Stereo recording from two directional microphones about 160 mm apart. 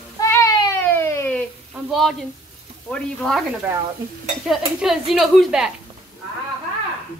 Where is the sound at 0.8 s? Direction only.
15° left (ahead or behind).